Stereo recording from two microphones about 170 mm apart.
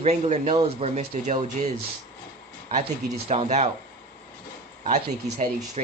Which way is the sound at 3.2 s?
40° right (ahead or behind).